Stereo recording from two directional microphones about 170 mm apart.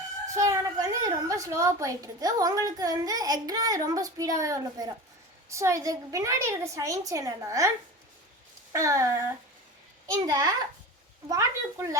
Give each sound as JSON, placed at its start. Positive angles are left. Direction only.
{"t": 0.3, "sound": "a woman's voice", "side_deg": -20}
{"t": 8.7, "sound": "a sound", "side_deg": -20}
{"t": 10.1, "sound": "a woman's voice", "side_deg": -25}